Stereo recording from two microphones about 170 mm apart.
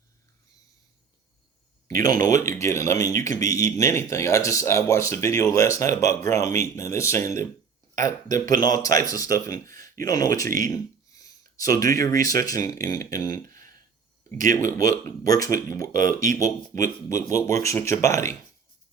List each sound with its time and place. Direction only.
1.9 s speech: 20° left (ahead or behind)
14.5 s speech: 20° left (ahead or behind)